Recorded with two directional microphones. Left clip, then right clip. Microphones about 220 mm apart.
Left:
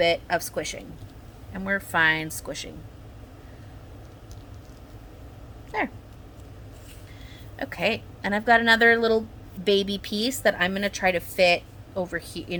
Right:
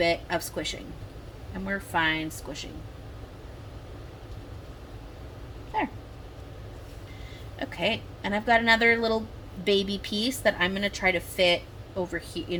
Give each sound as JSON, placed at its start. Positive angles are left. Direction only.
{"t": 0.0, "sound": "a woman's voice", "side_deg": 10}
{"t": 7.6, "sound": "a woman's voice", "side_deg": 15}